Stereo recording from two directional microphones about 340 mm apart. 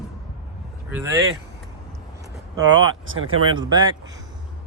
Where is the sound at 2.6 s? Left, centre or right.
Right.